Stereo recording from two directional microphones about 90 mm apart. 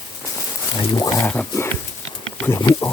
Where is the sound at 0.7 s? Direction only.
50° left (ahead or behind).